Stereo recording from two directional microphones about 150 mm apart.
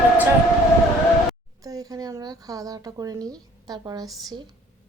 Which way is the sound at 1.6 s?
25° right (ahead or behind).